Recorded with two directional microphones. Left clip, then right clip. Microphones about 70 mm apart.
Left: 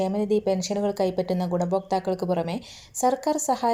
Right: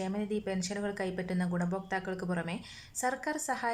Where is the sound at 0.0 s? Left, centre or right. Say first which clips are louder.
Left 12 dB; left.